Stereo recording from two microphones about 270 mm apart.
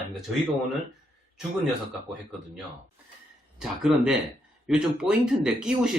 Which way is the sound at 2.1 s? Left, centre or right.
Centre.